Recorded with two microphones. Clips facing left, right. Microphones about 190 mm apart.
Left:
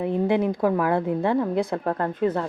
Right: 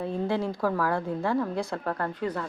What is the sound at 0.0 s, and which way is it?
A woman's voice, 20° left (ahead or behind).